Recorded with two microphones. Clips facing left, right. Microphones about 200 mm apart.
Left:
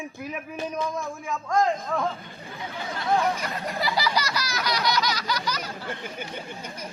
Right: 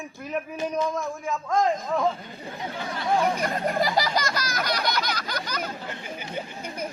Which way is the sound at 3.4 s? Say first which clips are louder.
Right 5 dB; 50° right (ahead or behind).